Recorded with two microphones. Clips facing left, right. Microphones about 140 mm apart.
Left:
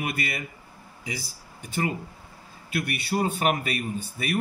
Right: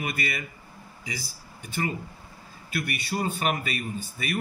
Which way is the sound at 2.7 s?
60° left (ahead or behind).